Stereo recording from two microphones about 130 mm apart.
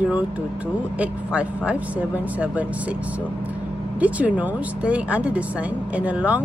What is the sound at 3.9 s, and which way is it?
Speech, 10° right (ahead or behind).